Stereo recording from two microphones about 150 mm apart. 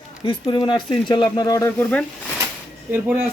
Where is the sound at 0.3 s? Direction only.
30° left (ahead or behind).